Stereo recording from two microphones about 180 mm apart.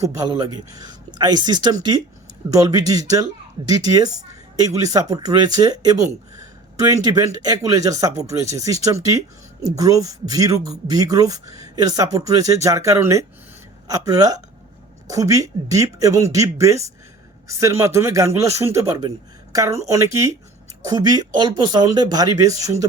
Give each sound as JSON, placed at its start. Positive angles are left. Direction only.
{"t": 0.0, "sound": "speech", "side_deg": -20}